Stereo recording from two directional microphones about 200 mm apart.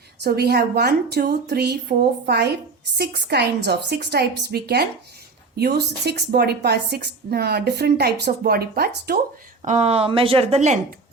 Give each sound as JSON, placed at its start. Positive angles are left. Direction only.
{"t": 0.2, "sound": "a woman's voice", "side_deg": -55}
{"t": 9.6, "sound": "speech", "side_deg": -35}